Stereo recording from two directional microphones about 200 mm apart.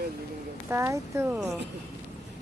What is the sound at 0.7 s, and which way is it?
Speech, 15° right (ahead or behind).